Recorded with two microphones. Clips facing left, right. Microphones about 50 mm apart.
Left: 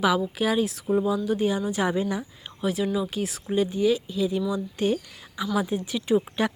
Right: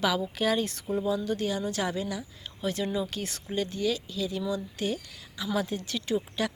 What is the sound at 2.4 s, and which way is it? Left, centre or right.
Speech, centre.